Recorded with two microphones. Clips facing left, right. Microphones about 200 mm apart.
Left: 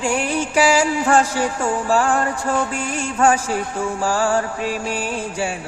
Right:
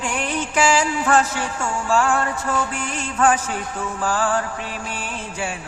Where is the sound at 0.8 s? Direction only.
30° left (ahead or behind).